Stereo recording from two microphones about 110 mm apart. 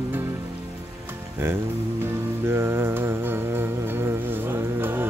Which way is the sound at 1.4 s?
20° right (ahead or behind).